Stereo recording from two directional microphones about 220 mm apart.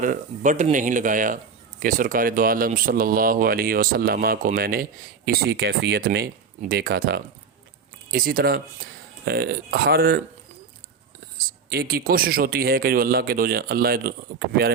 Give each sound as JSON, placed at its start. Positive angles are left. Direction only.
{"t": 0.0, "sound": "speech", "side_deg": -35}
{"t": 11.3, "sound": "speech", "side_deg": -45}